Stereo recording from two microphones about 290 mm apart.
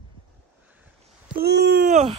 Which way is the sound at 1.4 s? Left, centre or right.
Right.